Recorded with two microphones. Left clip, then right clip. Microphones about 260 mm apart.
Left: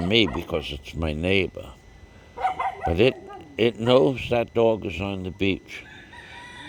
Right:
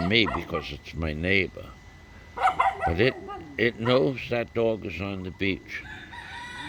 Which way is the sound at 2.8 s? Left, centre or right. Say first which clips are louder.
Left 3 dB; centre.